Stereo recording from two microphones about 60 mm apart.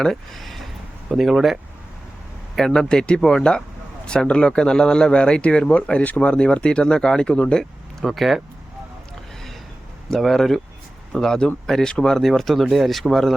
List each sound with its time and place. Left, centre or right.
0.0 s speech: centre
2.6 s a man's voice: centre
8.0 s speech: centre
10.1 s a man's voice: centre